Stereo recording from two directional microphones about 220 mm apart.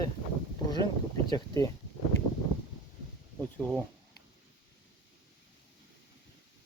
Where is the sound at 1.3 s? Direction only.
15° left (ahead or behind).